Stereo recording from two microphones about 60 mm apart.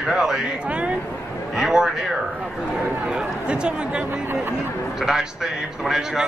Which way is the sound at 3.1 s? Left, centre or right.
Centre.